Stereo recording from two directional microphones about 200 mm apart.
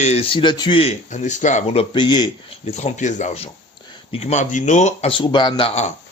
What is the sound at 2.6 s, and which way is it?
Speech, 35° left (ahead or behind).